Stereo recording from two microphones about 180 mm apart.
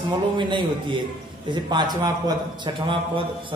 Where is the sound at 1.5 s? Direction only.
25° right (ahead or behind).